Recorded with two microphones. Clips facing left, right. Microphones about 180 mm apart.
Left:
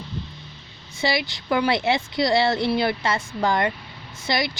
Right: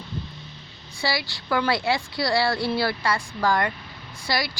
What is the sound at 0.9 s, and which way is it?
Speech, 20° left (ahead or behind).